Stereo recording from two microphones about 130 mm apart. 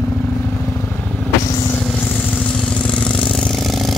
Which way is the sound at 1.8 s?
10° left (ahead or behind).